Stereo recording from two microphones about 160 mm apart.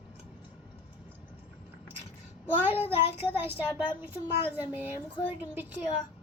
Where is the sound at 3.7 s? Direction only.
30° left (ahead or behind).